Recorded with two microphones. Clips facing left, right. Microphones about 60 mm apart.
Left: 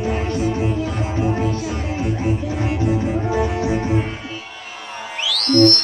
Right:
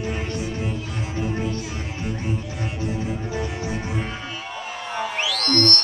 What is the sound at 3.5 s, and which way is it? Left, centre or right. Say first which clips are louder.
Music: left 8 dB; left.